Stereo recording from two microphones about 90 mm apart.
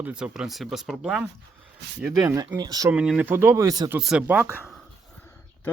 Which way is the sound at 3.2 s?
30° right (ahead or behind).